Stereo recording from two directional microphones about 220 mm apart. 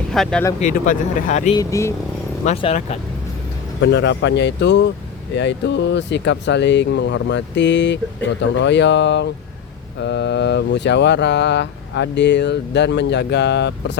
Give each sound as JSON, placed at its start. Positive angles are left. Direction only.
{"t": 0.1, "sound": "speech", "side_deg": 5}
{"t": 0.6, "sound": "speech", "side_deg": 35}
{"t": 1.5, "sound": "speech", "side_deg": 15}
{"t": 2.4, "sound": "speech", "side_deg": 30}
{"t": 3.8, "sound": "speech", "side_deg": 50}